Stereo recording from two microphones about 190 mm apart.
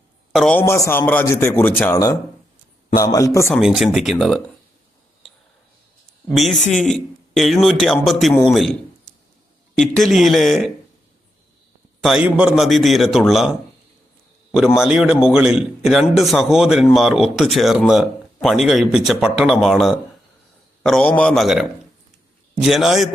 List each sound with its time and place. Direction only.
0.3 s a man's voice: 5° left (ahead or behind)
0.6 s speech: 15° left (ahead or behind)
3.5 s a man's voice: centre (ahead or behind)
6.3 s a man's voice: centre (ahead or behind)
9.7 s a man's voice: 5° left (ahead or behind)
11.9 s a man's voice: centre (ahead or behind)
14.8 s a man's voice: 5° right (ahead or behind)